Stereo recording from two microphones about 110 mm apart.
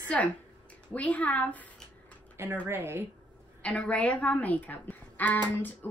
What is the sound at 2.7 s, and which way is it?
Speech, 20° right (ahead or behind).